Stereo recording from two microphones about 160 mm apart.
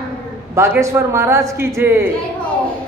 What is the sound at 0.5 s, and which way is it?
A woman's voice, 15° right (ahead or behind).